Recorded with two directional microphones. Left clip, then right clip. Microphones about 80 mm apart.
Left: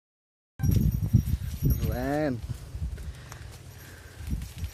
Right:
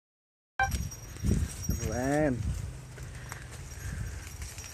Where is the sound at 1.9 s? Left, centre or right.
Centre.